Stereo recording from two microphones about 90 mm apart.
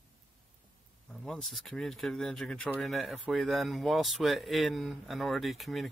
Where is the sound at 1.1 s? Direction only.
5° left (ahead or behind).